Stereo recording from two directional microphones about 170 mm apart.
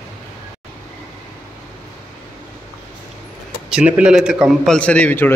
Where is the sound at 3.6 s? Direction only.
5° right (ahead or behind).